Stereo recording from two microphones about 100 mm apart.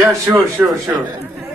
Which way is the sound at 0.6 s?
40° right (ahead or behind).